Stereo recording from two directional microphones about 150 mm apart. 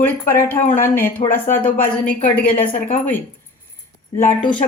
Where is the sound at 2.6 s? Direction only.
60° left (ahead or behind).